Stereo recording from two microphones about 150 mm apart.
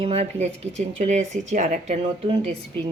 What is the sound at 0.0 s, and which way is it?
Speech, 45° right (ahead or behind).